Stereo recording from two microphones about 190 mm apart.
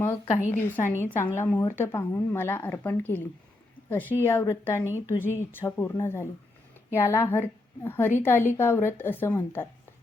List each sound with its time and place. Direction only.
0.1 s a woman's voice: 35° left (ahead or behind)
0.5 s a woman's voice: 10° left (ahead or behind)